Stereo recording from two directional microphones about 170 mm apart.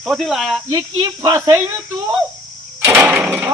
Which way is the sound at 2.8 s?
15° right (ahead or behind).